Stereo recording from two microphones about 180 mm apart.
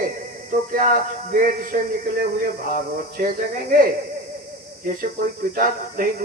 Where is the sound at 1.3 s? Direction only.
50° right (ahead or behind).